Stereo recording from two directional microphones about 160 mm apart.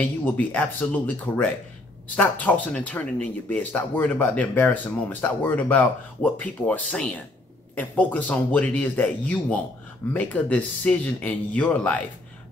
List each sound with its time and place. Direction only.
0.0 s speech: 10° left (ahead or behind)